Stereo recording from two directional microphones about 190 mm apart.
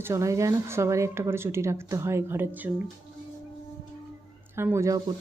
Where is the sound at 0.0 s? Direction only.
15° right (ahead or behind).